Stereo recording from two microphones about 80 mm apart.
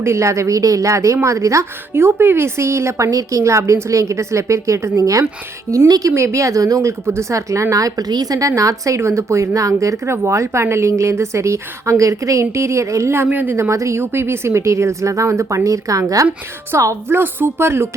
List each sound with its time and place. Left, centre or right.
0.0 s a woman's voice: right
13.2 s a woman's voice: right